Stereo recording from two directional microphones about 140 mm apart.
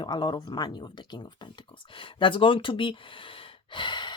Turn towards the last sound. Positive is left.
turn(degrees=35)  # may be behind; listen again after turning